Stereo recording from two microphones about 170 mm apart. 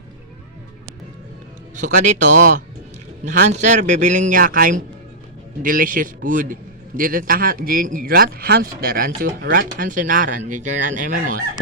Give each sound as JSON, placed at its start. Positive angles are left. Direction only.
{"t": 1.7, "sound": "a man's voice", "side_deg": -45}